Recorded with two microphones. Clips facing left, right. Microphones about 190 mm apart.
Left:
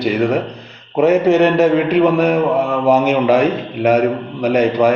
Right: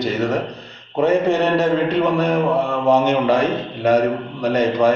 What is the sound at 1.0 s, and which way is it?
Speech, 70° left (ahead or behind).